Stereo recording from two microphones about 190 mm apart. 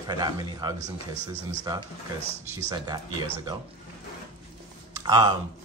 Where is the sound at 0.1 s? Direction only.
20° right (ahead or behind).